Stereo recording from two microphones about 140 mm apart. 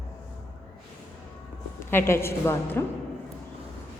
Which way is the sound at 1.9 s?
15° left (ahead or behind).